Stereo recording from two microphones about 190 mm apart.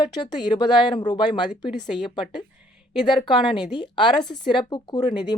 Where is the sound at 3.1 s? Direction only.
25° left (ahead or behind).